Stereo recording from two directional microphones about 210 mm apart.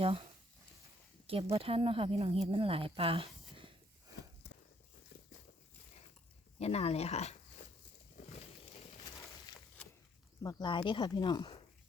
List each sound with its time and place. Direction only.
0.0 s speech: 25° right (ahead or behind)
1.3 s speech: 30° right (ahead or behind)
4.4 s a sound: 50° left (ahead or behind)
6.6 s speech: 30° left (ahead or behind)
8.2 s a sound: 35° left (ahead or behind)
10.4 s speech: 20° left (ahead or behind)